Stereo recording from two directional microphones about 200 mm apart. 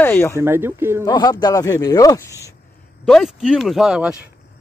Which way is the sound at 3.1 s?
Centre (ahead or behind).